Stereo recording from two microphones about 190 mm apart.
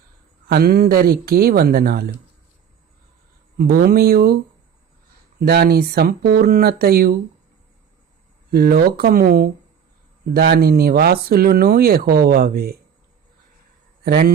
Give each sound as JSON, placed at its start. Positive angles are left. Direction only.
{"t": 0.4, "sound": "speech", "side_deg": -55}
{"t": 3.6, "sound": "speech", "side_deg": -50}
{"t": 5.4, "sound": "speech", "side_deg": -55}
{"t": 8.4, "sound": "speech", "side_deg": -55}
{"t": 14.0, "sound": "speech", "side_deg": -55}